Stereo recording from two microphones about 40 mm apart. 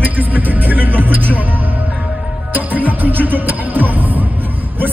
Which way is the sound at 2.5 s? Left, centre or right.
Right.